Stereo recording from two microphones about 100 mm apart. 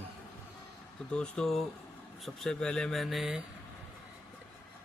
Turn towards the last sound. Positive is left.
turn(degrees=-5)  # may be behind; listen again after turning